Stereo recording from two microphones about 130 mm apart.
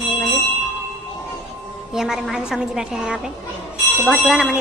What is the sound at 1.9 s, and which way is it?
Speech, 5° right (ahead or behind).